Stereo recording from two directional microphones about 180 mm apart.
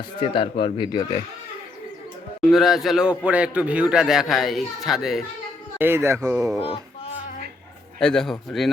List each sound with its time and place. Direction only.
0.2 s speech: 30° left (ahead or behind)
2.5 s a man's voice: centre (ahead or behind)
5.8 s speech: 15° right (ahead or behind)
7.9 s a man's voice: 5° left (ahead or behind)